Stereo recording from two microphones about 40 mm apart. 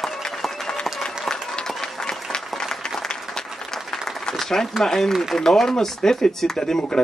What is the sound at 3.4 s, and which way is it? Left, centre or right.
Applause, centre.